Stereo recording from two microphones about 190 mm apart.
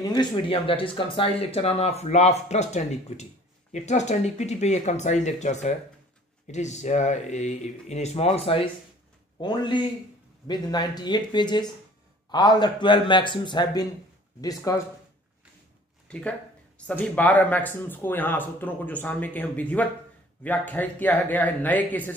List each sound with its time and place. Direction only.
0.0 s speech: 25° left (ahead or behind)
16.1 s speech: 5° left (ahead or behind)